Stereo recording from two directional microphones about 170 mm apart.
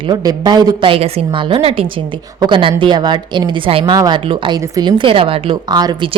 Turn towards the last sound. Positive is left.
turn(degrees=-25)  # may be behind; listen again after turning